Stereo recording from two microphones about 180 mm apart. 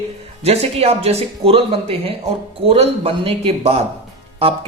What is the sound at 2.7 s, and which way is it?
Speech, 30° right (ahead or behind).